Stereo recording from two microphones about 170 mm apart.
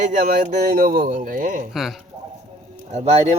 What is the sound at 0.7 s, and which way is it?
Speech, 60° right (ahead or behind).